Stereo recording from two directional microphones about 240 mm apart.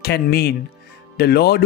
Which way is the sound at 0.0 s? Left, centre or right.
Left.